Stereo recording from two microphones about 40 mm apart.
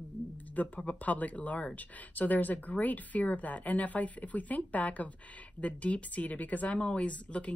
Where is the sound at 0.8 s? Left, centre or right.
Left.